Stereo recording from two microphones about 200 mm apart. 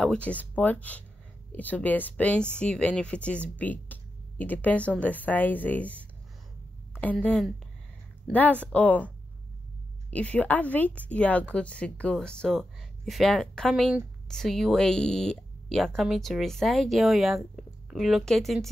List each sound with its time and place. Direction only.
0.0 s a woman's voice: 5° left (ahead or behind)
10.1 s speech: 5° left (ahead or behind)